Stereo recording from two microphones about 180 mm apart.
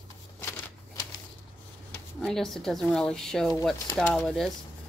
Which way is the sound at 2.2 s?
Centre (ahead or behind).